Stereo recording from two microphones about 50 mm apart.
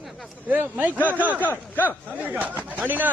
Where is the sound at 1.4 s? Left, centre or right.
Left.